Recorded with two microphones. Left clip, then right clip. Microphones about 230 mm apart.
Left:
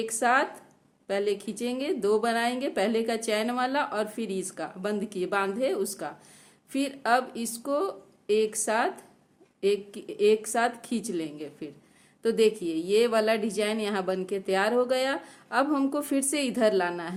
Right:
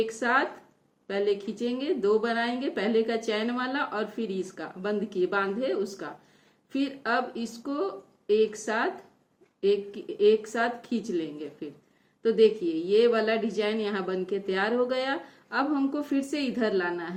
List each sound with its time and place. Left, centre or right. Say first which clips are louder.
0.0 s speech: left 1 dB; left